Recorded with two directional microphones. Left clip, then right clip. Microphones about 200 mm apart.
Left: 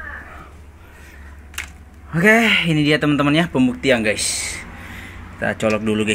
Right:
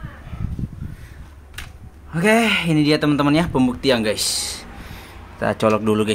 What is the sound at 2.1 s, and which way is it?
Speech, 10° left (ahead or behind).